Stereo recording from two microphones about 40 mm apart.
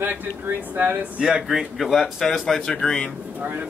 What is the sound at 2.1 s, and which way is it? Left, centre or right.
Speech, centre.